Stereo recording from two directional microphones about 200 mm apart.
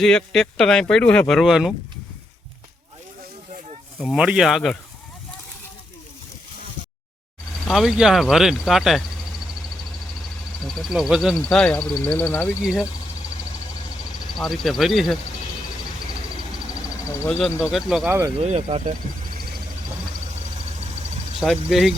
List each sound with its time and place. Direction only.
0.0 s speech: 5° left (ahead or behind)
4.0 s speech: 5° right (ahead or behind)
7.6 s speech: centre (ahead or behind)
10.7 s speech: centre (ahead or behind)
14.3 s speech: centre (ahead or behind)
17.2 s speech: 5° left (ahead or behind)
18.4 s speech: 35° right (ahead or behind)
21.4 s speech: centre (ahead or behind)